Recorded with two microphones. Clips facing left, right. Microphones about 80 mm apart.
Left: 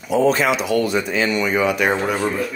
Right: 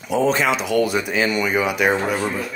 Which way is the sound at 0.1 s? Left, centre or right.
Centre.